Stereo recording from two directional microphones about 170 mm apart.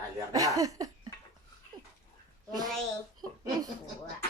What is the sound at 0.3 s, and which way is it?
Cough, 20° right (ahead or behind).